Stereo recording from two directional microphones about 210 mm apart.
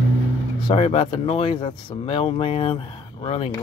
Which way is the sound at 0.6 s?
25° left (ahead or behind).